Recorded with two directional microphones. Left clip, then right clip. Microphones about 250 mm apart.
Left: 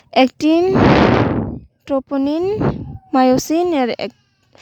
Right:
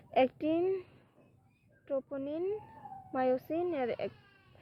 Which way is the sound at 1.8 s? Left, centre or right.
Left.